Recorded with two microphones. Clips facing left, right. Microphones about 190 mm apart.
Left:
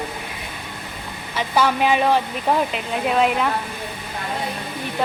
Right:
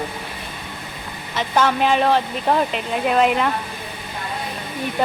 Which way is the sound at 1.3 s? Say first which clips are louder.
Right 1 dB; 10° left (ahead or behind).